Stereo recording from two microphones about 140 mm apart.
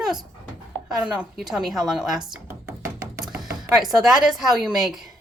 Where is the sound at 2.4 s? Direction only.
20° right (ahead or behind).